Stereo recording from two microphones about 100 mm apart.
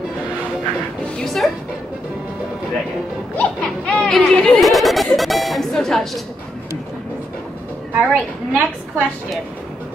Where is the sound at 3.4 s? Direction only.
15° left (ahead or behind).